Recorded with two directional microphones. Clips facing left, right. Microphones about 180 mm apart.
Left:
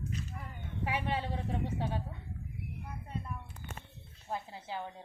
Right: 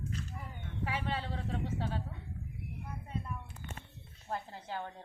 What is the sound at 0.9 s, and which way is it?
A woman's voice, 15° left (ahead or behind).